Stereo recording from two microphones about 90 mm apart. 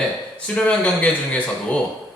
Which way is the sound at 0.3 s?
10° left (ahead or behind).